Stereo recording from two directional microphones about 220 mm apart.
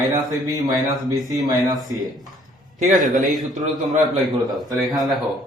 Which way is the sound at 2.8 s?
35° right (ahead or behind).